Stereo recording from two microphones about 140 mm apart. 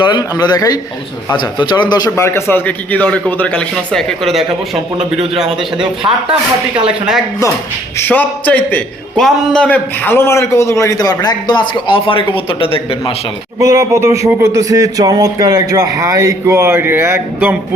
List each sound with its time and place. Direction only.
0.0 s a man's voice: 30° left (ahead or behind)
2.0 s a man's voice: 20° left (ahead or behind); by 4.8 s centre (ahead or behind)
6.0 s speech: 30° right (ahead or behind)
7.9 s a man's voice: 15° left (ahead or behind); by 13.1 s 40° left (ahead or behind)
13.6 s speech: 25° right (ahead or behind)